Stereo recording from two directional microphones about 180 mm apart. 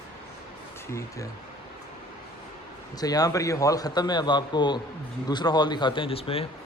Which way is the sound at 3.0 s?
20° left (ahead or behind).